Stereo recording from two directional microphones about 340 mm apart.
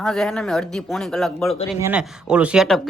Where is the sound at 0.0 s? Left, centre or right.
Centre.